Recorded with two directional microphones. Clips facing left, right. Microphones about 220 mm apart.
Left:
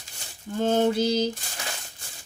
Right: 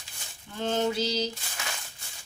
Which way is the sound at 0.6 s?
45° left (ahead or behind).